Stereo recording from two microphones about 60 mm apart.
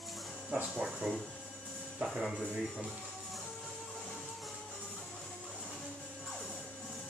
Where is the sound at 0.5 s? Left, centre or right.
Centre.